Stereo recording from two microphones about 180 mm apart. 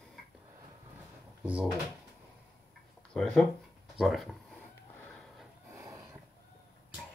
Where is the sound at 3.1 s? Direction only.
5° left (ahead or behind).